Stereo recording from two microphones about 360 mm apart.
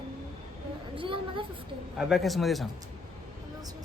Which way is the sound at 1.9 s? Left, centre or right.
Centre.